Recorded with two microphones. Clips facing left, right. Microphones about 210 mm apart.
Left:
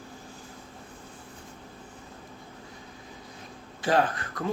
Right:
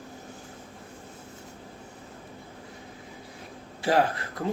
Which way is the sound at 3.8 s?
25° right (ahead or behind).